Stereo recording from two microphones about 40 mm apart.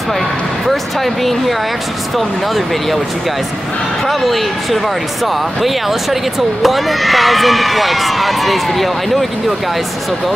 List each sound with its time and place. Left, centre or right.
0.7 s speech: centre
4.1 s speech: centre